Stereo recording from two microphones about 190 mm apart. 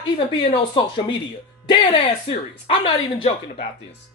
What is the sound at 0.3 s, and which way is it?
Speech, 25° left (ahead or behind).